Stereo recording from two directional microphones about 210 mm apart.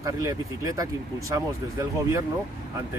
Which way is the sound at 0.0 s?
15° right (ahead or behind).